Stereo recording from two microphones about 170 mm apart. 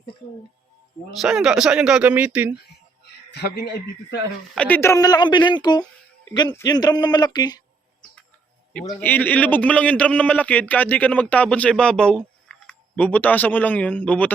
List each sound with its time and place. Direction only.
1.2 s speech: 5° right (ahead or behind)
3.0 s speech: 75° left (ahead or behind)
4.5 s speech: 10° left (ahead or behind)
9.0 s a man's voice: 10° left (ahead or behind)